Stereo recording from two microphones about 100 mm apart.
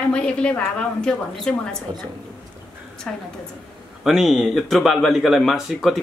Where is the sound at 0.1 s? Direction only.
10° left (ahead or behind).